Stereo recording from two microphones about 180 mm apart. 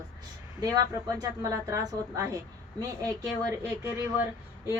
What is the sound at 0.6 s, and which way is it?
Speech, 20° right (ahead or behind).